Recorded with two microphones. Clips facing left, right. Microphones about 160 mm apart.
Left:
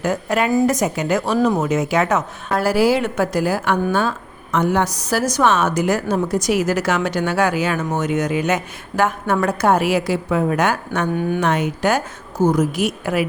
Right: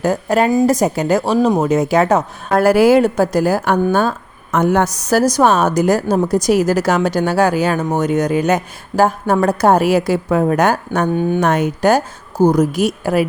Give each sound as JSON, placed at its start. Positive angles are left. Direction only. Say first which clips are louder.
{"t": 0.0, "sound": "a woman's voice", "louder": "right 4 dB", "side_deg": -35}
{"t": 2.6, "sound": "a woman's voice", "louder": "right 6 dB", "side_deg": -55}
{"t": 3.0, "sound": "a woman's voice", "louder": "right 5 dB", "side_deg": -40}